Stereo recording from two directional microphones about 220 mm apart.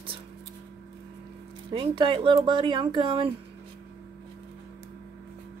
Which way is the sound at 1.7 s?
25° right (ahead or behind).